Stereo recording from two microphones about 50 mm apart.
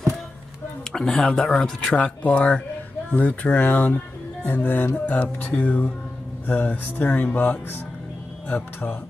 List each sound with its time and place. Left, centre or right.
0.9 s speech: centre; by 7.1 s left
7.1 s speech: left
8.5 s speech: left